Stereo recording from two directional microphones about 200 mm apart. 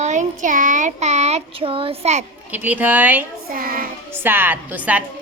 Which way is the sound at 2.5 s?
10° right (ahead or behind).